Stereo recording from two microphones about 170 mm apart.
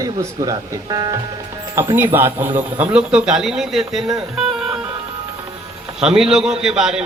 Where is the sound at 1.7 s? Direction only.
15° right (ahead or behind).